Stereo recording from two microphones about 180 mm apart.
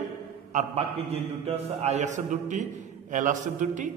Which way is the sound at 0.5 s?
40° right (ahead or behind).